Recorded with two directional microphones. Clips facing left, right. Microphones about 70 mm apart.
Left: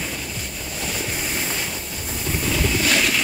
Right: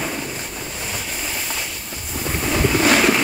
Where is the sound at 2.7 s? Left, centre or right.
Right.